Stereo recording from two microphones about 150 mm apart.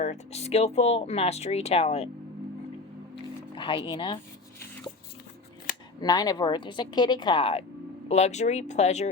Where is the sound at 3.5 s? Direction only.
35° left (ahead or behind).